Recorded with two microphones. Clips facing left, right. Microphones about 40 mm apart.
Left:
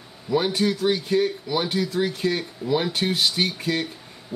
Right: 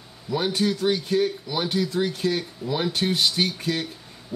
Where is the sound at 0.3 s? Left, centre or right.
Centre.